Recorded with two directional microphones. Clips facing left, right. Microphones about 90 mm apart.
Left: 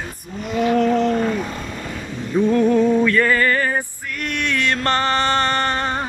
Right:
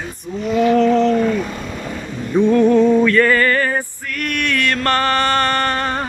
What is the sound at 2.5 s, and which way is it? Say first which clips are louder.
Music: right 4 dB; 5° left (ahead or behind).